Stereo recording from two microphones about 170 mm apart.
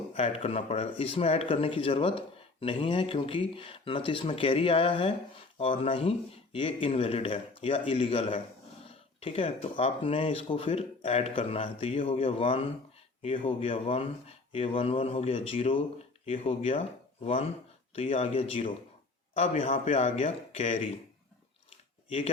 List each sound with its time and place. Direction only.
0.1 s speech: 35° left (ahead or behind)